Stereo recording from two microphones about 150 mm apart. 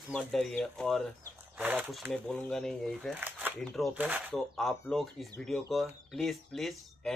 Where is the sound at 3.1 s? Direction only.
10° right (ahead or behind).